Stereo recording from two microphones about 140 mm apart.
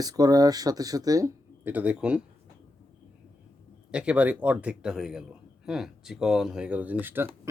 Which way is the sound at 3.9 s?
10° right (ahead or behind).